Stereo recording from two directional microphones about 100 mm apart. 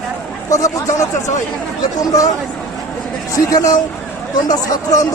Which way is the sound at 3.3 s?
35° left (ahead or behind).